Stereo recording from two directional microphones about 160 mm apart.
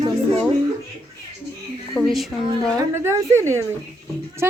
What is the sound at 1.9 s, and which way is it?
Speech, centre (ahead or behind).